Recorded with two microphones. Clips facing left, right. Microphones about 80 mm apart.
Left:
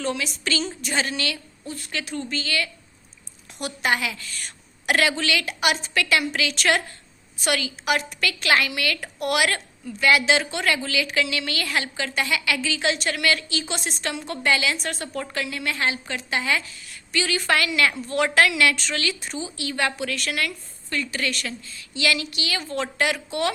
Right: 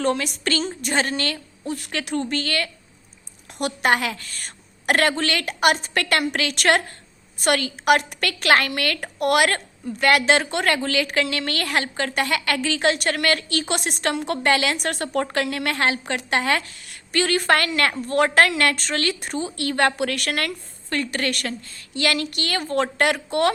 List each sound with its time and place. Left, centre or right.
0.0 s a woman's voice: right
1.6 s a woman's voice: right